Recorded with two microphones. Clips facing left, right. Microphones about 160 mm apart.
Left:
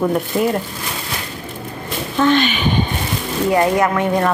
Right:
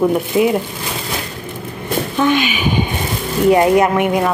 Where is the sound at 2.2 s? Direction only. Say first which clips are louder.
Left 2 dB; 10° right (ahead or behind).